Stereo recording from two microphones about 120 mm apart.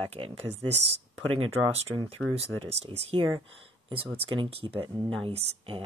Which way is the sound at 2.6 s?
55° right (ahead or behind).